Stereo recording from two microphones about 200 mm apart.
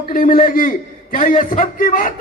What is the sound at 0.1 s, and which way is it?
A man's voice, 45° left (ahead or behind).